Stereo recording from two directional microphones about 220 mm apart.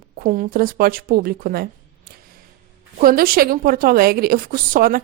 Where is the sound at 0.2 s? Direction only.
40° right (ahead or behind).